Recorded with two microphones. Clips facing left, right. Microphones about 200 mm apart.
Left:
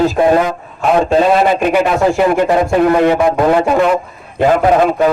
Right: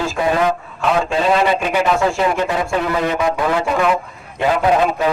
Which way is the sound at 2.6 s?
45° left (ahead or behind).